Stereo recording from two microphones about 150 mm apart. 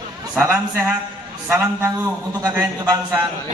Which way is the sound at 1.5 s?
15° right (ahead or behind).